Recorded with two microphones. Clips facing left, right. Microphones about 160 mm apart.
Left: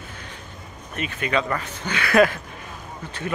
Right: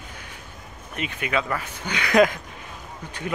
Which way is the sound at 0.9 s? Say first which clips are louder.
Left 2 dB; 15° right (ahead or behind).